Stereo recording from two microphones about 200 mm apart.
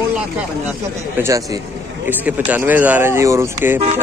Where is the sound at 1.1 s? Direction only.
15° right (ahead or behind).